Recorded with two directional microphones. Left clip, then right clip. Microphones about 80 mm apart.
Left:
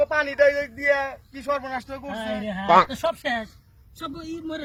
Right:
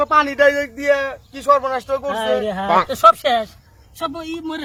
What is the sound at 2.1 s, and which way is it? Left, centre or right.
Speech, right.